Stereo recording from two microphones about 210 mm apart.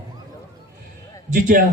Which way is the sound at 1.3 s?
40° right (ahead or behind).